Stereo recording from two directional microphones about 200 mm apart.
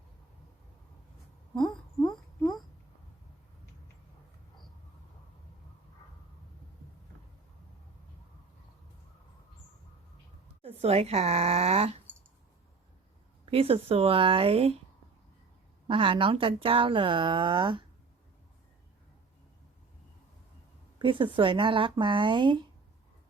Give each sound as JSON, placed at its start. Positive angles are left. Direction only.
{"t": 10.6, "sound": "speech", "side_deg": -30}
{"t": 13.4, "sound": "speech", "side_deg": -30}
{"t": 15.9, "sound": "speech", "side_deg": -25}
{"t": 21.0, "sound": "speech", "side_deg": -25}